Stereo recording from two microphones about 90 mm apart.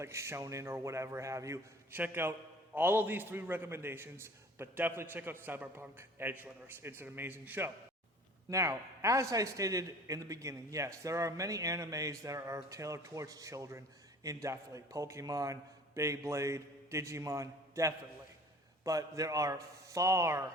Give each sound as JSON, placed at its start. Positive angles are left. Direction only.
{"t": 0.0, "sound": "a man's voice", "side_deg": -30}
{"t": 1.9, "sound": "a man's voice", "side_deg": -25}
{"t": 8.4, "sound": "a man's voice", "side_deg": -35}